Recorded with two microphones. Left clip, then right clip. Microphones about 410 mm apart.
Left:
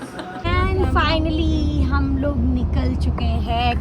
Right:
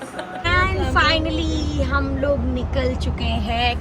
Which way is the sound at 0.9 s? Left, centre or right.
Centre.